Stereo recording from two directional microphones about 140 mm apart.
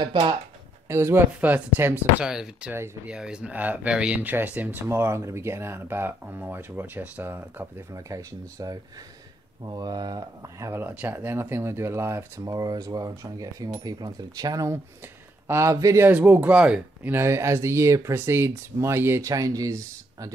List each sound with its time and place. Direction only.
0.0 s speech: 35° right (ahead or behind)
0.8 s speech: 20° right (ahead or behind)
2.7 s speech: 15° right (ahead or behind)
3.2 s speech: 5° right (ahead or behind); by 20.3 s 25° right (ahead or behind)